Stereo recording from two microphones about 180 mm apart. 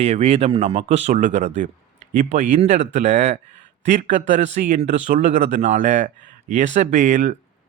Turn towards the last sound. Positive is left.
turn(degrees=-45)  # may be behind; listen again after turning